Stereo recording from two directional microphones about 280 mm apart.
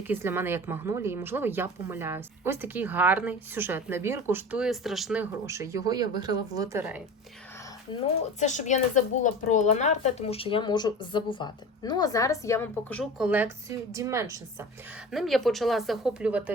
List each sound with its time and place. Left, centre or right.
0.1 s a woman's voice: centre
8.0 s speech: left; by 14.3 s centre
15.1 s speech: centre